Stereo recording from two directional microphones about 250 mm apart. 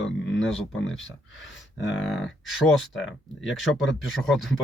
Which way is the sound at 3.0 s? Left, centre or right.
Left.